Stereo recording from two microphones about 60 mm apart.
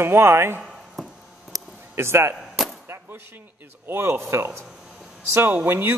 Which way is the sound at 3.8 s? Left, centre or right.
Right.